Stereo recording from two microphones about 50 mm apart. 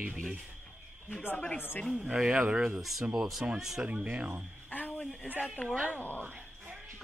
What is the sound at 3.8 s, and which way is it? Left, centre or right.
Speech, right.